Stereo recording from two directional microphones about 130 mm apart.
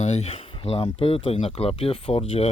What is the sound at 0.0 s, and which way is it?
Speech, 55° left (ahead or behind).